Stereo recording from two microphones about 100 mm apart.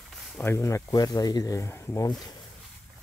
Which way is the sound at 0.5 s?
30° left (ahead or behind).